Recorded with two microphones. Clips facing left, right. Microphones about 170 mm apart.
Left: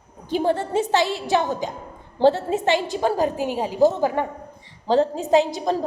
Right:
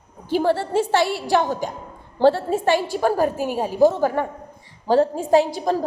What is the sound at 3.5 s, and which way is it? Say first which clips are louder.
A woman's voice: right 2 dB; 15° left (ahead or behind).